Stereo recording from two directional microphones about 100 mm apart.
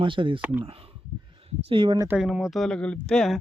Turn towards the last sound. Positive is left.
turn(degrees=5)  # may be behind; listen again after turning